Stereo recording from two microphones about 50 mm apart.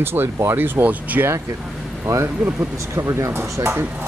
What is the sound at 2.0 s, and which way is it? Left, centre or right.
Speech, right.